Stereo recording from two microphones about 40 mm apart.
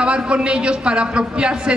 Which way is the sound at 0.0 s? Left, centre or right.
Right.